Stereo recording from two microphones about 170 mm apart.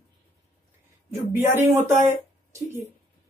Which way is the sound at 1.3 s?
15° right (ahead or behind).